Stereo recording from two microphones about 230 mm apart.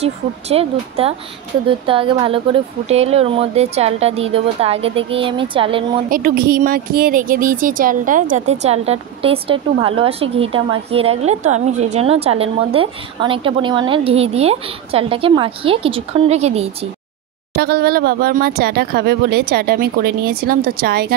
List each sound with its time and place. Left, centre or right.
0.0 s speech: right
6.0 s speech: right
17.6 s speech: right